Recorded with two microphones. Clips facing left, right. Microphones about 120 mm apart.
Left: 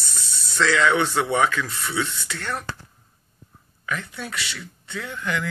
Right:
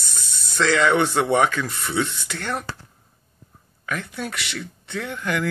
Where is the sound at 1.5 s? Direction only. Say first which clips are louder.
Right 1 dB; 45° right (ahead or behind).